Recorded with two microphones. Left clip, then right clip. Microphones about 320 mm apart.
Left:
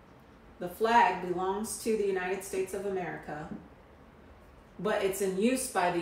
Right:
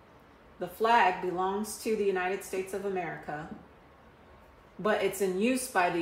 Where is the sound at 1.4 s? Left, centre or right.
Right.